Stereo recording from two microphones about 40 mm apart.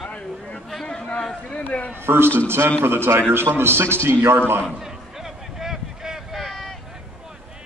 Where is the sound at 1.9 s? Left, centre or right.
Right.